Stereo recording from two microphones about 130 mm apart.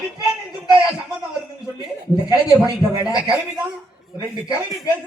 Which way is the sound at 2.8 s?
30° right (ahead or behind).